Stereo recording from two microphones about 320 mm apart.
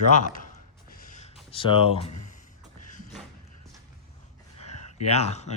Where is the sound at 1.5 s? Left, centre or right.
Centre.